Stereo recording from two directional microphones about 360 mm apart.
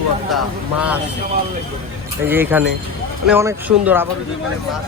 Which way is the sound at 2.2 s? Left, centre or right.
Centre.